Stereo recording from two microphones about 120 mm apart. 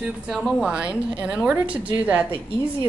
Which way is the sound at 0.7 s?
10° right (ahead or behind).